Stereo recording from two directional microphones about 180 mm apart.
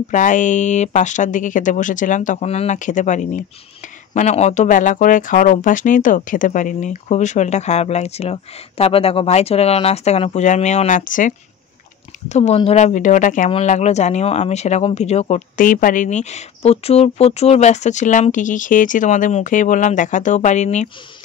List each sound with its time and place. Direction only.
0.1 s speech: 45° left (ahead or behind)